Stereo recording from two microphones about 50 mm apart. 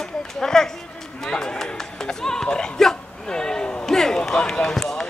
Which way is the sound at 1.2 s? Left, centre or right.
Centre.